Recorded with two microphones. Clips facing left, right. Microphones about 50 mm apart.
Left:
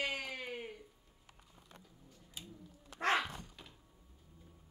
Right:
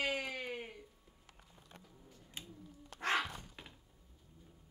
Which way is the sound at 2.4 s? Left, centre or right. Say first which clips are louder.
Right 1 dB; right.